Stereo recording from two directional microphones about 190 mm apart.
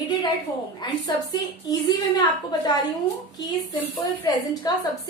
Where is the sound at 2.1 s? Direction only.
25° left (ahead or behind).